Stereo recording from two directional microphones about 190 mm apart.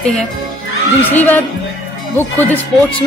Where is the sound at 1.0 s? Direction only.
10° left (ahead or behind).